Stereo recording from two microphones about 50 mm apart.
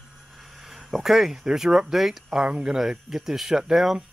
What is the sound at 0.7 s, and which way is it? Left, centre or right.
Speech, centre.